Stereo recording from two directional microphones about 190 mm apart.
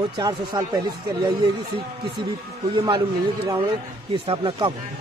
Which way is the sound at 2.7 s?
25° right (ahead or behind).